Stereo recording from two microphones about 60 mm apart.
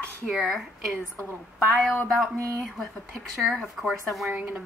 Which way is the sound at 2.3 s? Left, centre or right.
Right.